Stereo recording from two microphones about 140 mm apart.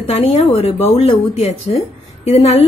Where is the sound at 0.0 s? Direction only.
45° left (ahead or behind).